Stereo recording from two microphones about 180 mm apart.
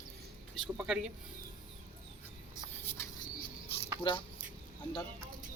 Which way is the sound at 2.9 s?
15° left (ahead or behind).